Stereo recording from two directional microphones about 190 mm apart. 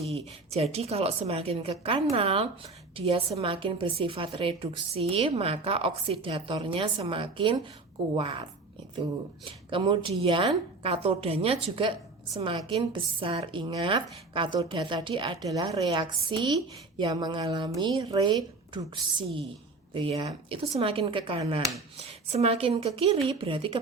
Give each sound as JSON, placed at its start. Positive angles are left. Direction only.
{"t": 0.1, "sound": "a woman's voice", "side_deg": -35}
{"t": 9.5, "sound": "a woman's voice", "side_deg": -25}